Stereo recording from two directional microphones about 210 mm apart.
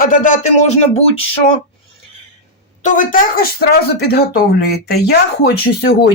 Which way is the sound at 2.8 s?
40° left (ahead or behind).